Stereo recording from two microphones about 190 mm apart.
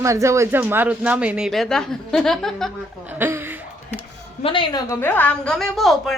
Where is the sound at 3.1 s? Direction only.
10° right (ahead or behind).